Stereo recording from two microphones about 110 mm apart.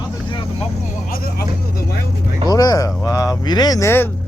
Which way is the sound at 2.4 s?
35° left (ahead or behind).